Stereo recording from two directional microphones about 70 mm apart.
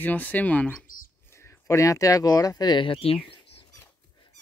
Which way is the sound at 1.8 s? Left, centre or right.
Left.